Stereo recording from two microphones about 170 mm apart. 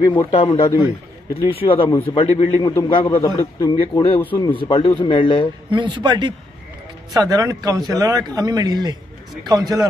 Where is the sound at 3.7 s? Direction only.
30° left (ahead or behind).